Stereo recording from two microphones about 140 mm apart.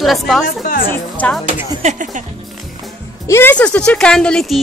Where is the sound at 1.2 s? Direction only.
10° left (ahead or behind).